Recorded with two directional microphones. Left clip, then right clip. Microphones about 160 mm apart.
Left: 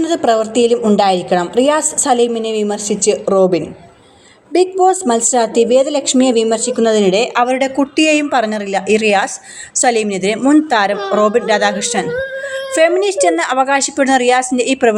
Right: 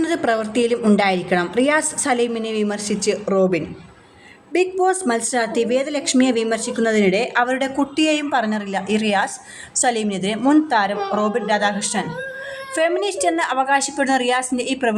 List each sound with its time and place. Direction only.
0.0 s a woman's voice: 10° left (ahead or behind); by 14.9 s 25° left (ahead or behind)